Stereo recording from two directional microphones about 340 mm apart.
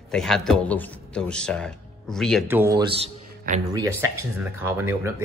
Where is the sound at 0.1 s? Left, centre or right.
Centre.